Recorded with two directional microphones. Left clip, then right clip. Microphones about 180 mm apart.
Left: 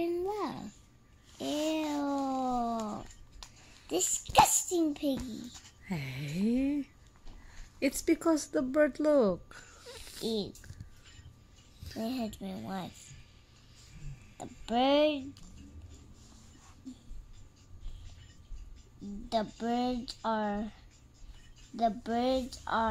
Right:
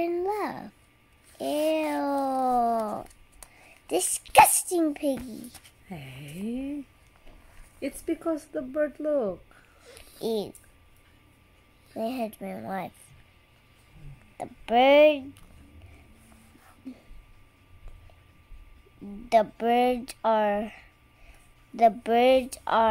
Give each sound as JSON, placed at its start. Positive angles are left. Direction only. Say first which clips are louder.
{"t": 0.0, "sound": "babbling", "louder": "right 5 dB", "side_deg": -10}
{"t": 1.4, "sound": "cat", "louder": "right 7 dB", "side_deg": -5}
{"t": 3.8, "sound": "a sound", "louder": "right 4 dB", "side_deg": -10}
{"t": 5.9, "sound": "speech", "louder": "left 3 dB", "side_deg": 15}
{"t": 7.8, "sound": "speech", "louder": "left 2 dB", "side_deg": 20}
{"t": 10.2, "sound": "speech", "louder": "right 6 dB", "side_deg": -15}
{"t": 12.0, "sound": "speech", "louder": "right 7 dB", "side_deg": -10}
{"t": 14.3, "sound": "a child's voice", "louder": "right 9 dB", "side_deg": -15}
{"t": 19.3, "sound": "speech", "louder": "right 11 dB", "side_deg": -25}